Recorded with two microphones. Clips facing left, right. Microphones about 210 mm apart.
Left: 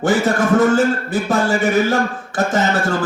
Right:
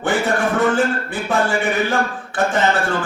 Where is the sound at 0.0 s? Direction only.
40° left (ahead or behind).